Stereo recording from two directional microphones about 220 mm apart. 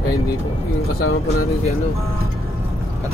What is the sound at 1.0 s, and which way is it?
Speech, 70° left (ahead or behind).